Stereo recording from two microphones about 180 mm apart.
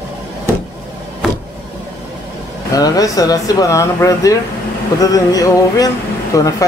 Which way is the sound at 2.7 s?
20° left (ahead or behind).